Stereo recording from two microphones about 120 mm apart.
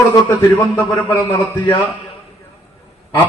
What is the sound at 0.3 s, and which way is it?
A man's voice, 25° left (ahead or behind).